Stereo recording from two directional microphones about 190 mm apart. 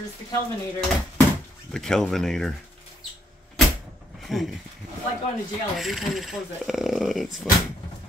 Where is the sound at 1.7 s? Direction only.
Centre (ahead or behind).